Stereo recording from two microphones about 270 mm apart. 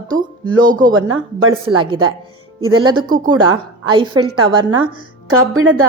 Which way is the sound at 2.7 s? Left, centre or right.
Centre.